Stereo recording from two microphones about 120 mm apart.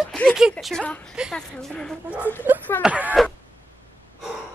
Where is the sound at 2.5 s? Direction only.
15° right (ahead or behind).